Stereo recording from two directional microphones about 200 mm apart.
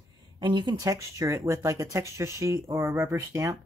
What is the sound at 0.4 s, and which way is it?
Speech, 20° right (ahead or behind).